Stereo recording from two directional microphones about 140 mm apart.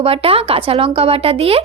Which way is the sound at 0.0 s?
45° right (ahead or behind).